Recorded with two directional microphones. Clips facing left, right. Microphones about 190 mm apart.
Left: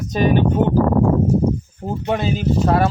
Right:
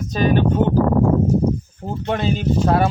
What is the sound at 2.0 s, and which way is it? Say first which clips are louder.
Speech: even; 5° left (ahead or behind).